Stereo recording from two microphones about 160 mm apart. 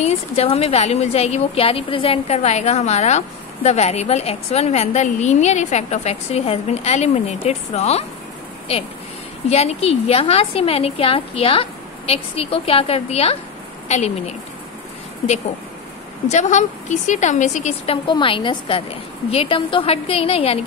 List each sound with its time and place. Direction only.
0.0 s a woman's voice: 40° left (ahead or behind)
16.3 s a woman's voice: 50° left (ahead or behind)
18.0 s a woman's voice: 30° left (ahead or behind)